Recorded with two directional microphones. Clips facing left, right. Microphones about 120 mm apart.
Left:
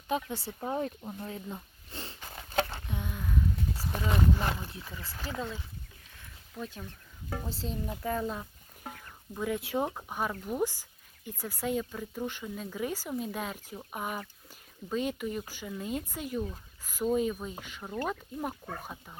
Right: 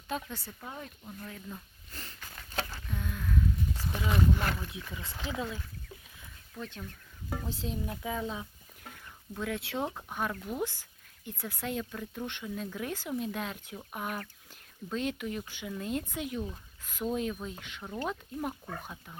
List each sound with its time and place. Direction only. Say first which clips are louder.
0.3 s a sound: left 10 dB; 30° left (ahead or behind); by 3.8 s 15° left (ahead or behind)
3.9 s speech: even; centre (ahead or behind)
6.6 s speech: left 1 dB; 5° left (ahead or behind)